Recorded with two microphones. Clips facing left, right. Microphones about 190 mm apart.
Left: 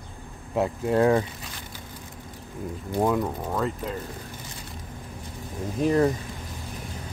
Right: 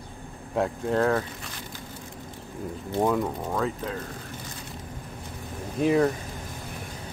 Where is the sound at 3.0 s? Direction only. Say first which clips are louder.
Even; centre (ahead or behind).